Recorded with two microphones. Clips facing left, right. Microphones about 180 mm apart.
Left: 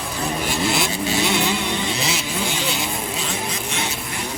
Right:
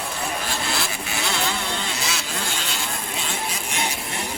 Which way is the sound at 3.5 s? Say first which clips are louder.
Left 1 dB; 15° right (ahead or behind).